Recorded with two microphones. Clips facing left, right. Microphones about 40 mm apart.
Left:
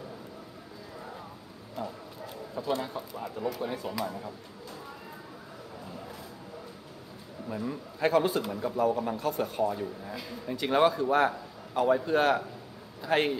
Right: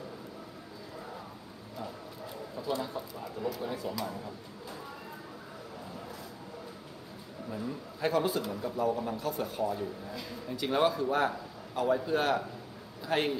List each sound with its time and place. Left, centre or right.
1.8 s a sound: centre
2.6 s speech: left
4.0 s a man's voice: centre
7.4 s a man's voice: centre
8.5 s a man's voice: centre
9.1 s speech: centre
9.4 s a man's voice: centre